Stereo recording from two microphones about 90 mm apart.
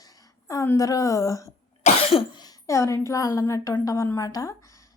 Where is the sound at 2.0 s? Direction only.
90° left.